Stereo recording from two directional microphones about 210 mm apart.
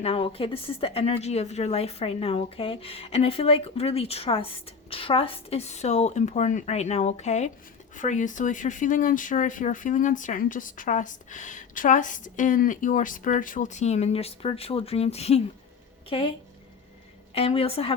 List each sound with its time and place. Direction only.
0.0 s a woman's voice: 25° left (ahead or behind)
17.3 s a woman's voice: 25° left (ahead or behind)